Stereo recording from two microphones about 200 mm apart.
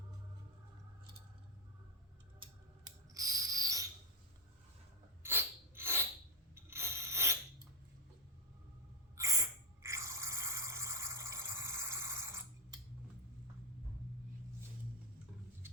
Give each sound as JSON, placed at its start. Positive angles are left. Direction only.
{"t": 3.2, "sound": "owl", "side_deg": -20}
{"t": 5.2, "sound": "a sound", "side_deg": -10}
{"t": 6.5, "sound": "ratchet", "side_deg": -10}
{"t": 9.1, "sound": "drip", "side_deg": -15}